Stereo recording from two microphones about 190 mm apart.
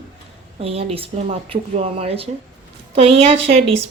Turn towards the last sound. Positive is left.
turn(degrees=-30)  # may be behind; listen again after turning